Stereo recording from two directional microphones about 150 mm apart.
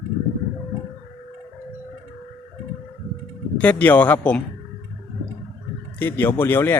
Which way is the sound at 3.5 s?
10° left (ahead or behind).